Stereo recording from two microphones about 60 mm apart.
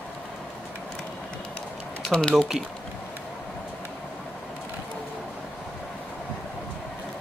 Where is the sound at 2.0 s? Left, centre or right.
Centre.